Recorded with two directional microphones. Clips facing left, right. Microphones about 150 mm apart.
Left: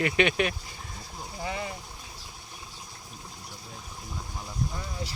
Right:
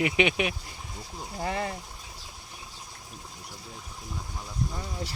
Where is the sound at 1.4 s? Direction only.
55° right (ahead or behind).